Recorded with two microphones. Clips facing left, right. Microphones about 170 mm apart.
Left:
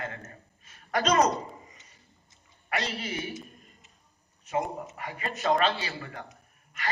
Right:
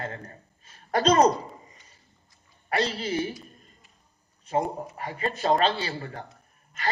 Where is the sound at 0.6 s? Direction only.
30° right (ahead or behind).